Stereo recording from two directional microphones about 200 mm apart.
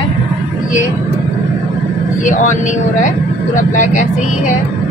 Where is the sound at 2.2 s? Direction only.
40° left (ahead or behind).